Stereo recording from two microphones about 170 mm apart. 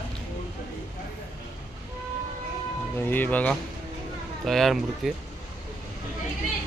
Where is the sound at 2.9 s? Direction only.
10° left (ahead or behind).